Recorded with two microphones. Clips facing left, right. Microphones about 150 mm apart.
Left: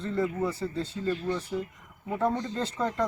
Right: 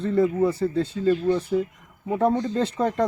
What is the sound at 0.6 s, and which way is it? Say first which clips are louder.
Speech: right 8 dB; 55° right (ahead or behind).